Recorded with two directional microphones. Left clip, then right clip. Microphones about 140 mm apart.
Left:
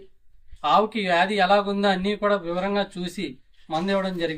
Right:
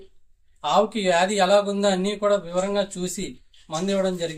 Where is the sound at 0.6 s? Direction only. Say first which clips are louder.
Even; 35° right (ahead or behind).